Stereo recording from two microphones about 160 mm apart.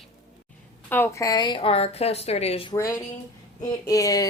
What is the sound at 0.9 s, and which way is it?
A woman's voice, 15° left (ahead or behind).